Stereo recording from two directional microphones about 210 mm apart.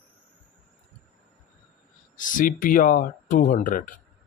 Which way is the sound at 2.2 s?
40° left (ahead or behind).